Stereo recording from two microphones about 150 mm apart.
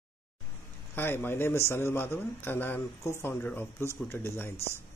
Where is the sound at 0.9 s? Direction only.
15° left (ahead or behind).